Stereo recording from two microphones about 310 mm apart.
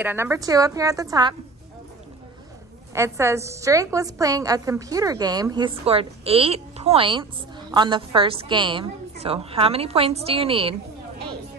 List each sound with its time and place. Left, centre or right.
0.0 s a woman's voice: centre
2.9 s a woman's voice: centre